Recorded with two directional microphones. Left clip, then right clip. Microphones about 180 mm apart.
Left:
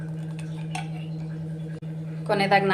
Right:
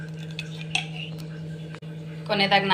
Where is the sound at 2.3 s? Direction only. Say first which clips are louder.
Even; 55° left (ahead or behind).